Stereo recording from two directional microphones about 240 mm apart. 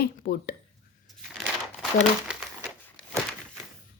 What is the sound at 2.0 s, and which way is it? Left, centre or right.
Crumpling, centre.